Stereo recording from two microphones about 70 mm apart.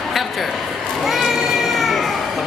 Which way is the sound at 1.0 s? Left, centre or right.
Centre.